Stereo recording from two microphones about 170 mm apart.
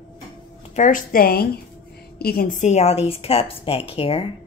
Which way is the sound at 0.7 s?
50° left (ahead or behind).